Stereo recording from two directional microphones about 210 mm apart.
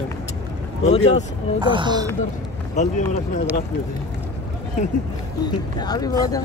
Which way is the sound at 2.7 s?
35° left (ahead or behind).